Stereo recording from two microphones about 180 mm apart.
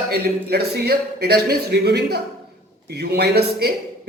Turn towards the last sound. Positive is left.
turn(degrees=-60)  # may be behind; listen again after turning